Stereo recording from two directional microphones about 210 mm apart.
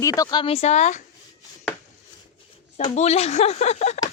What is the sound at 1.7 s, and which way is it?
Chopping, 5° left (ahead or behind).